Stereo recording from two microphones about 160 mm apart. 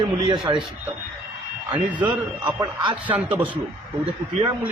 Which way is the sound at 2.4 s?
30° right (ahead or behind).